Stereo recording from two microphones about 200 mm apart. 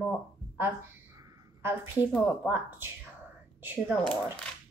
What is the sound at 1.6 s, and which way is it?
A woman's voice, 10° right (ahead or behind).